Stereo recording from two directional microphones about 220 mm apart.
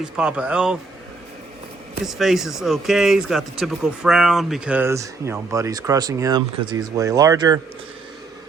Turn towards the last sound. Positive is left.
turn(degrees=-15)  # may be behind; listen again after turning